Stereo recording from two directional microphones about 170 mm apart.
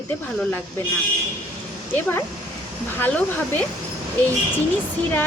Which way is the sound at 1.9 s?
10° left (ahead or behind).